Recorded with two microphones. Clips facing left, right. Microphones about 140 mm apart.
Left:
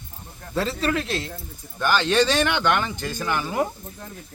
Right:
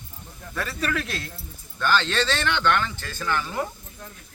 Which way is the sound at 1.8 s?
15° left (ahead or behind).